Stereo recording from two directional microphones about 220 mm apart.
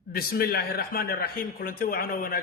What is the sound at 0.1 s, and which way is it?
Speech, 40° left (ahead or behind).